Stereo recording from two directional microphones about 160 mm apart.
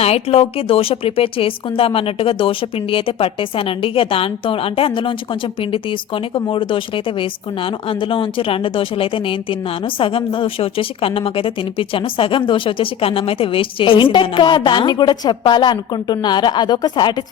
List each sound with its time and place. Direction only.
0.0 s speech: 40° left (ahead or behind)